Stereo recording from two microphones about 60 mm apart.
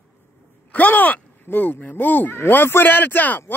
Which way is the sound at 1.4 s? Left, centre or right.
Left.